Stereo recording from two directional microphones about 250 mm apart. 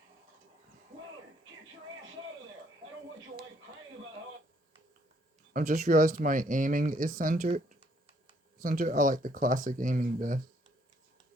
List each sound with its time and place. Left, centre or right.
5.5 s speech: right
8.6 s speech: right